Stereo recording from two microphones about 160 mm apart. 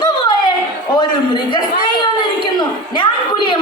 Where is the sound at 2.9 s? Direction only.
30° left (ahead or behind).